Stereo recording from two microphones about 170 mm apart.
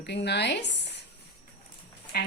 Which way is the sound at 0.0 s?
80° left.